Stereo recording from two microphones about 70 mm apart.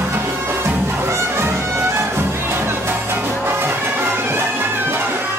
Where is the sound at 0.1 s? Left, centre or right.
Right.